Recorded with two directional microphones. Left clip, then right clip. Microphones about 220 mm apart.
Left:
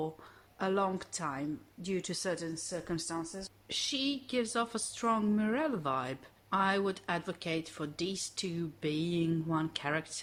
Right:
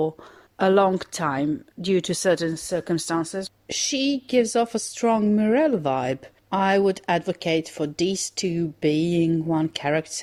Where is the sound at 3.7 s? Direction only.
25° right (ahead or behind).